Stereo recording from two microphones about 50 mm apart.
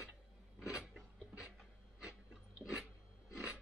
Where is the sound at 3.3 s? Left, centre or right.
Left.